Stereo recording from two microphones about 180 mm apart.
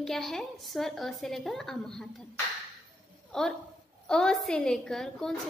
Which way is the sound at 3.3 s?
Centre (ahead or behind).